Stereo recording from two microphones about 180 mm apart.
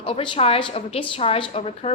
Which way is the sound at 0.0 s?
30° left (ahead or behind).